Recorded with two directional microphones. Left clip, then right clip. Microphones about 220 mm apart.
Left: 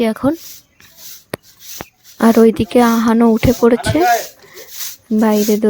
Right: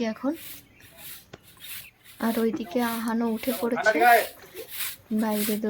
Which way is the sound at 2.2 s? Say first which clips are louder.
Left 16 dB; 45° left (ahead or behind).